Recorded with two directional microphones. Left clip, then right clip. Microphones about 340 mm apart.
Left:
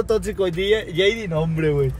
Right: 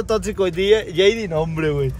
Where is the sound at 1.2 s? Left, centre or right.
Right.